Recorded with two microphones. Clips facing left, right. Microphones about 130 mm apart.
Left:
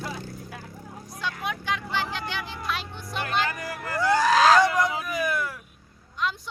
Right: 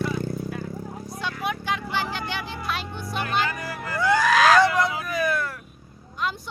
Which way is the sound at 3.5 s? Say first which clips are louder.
Right 1 dB; 45° left (ahead or behind).